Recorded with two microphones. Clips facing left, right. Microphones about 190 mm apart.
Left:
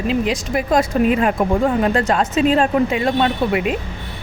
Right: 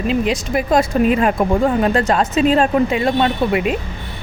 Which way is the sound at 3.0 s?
25° right (ahead or behind).